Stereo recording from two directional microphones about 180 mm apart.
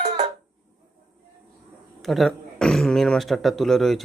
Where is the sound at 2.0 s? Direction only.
Centre (ahead or behind).